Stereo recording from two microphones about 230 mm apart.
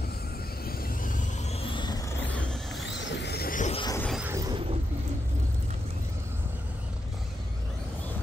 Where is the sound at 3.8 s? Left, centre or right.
Centre.